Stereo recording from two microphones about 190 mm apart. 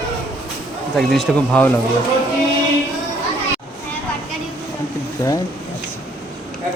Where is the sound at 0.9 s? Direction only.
Centre (ahead or behind).